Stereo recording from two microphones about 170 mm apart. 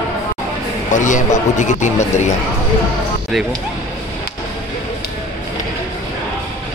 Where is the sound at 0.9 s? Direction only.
45° left (ahead or behind).